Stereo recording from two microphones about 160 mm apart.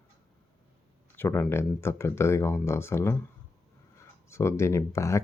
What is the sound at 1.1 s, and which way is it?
Speech, 15° left (ahead or behind).